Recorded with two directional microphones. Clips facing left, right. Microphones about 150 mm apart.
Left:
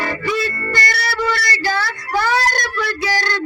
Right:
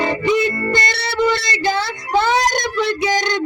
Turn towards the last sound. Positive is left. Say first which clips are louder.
# right 3 dB
turn(degrees=-20)  # may be behind; listen again after turning